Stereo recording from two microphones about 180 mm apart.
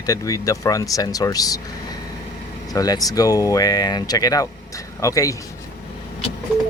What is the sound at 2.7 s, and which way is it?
Speech, 20° left (ahead or behind).